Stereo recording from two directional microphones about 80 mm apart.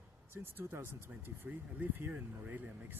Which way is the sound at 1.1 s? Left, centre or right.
Centre.